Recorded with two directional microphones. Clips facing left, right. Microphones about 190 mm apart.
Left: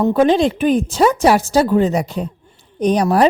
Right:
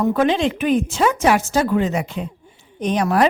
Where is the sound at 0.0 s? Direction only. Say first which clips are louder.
Left 4 dB; 30° left (ahead or behind).